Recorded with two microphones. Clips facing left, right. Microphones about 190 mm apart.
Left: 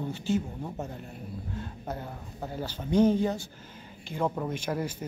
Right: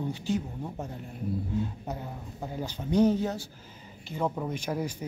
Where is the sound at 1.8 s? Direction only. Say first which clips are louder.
Even; 10° right (ahead or behind).